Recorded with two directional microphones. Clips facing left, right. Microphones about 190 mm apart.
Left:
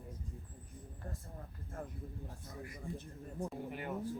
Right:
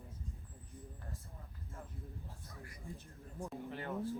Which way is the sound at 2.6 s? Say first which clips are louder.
Left 6 dB; 20° left (ahead or behind).